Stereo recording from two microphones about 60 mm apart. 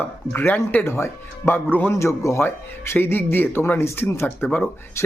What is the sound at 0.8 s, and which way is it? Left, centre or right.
Speech, left.